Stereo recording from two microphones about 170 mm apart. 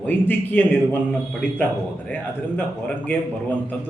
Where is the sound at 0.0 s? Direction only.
10° left (ahead or behind).